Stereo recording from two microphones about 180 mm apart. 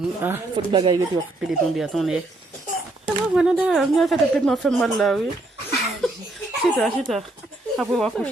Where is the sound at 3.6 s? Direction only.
Centre (ahead or behind).